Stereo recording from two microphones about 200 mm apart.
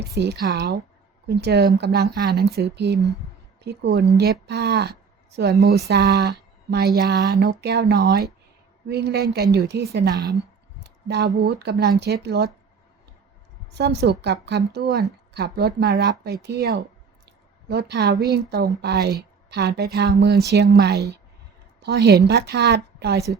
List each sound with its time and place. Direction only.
0.2 s a woman's voice: 55° right (ahead or behind)
10.8 s a sound: 55° right (ahead or behind)
11.3 s a woman's voice: 55° right (ahead or behind)
13.7 s a woman's voice: 55° right (ahead or behind)
17.2 s a sound: 55° right (ahead or behind)
18.3 s a woman's voice: 55° right (ahead or behind)